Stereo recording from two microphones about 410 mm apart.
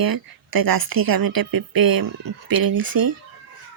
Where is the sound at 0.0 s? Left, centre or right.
Right.